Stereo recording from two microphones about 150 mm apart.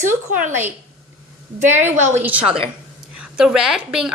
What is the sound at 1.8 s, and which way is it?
Speech, 50° right (ahead or behind).